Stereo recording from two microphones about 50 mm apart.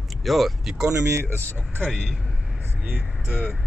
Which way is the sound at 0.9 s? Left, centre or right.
Right.